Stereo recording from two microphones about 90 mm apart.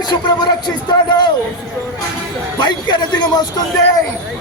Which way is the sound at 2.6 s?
55° left (ahead or behind).